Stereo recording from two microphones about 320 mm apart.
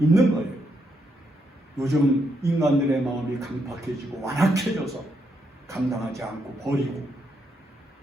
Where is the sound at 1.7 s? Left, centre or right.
Centre.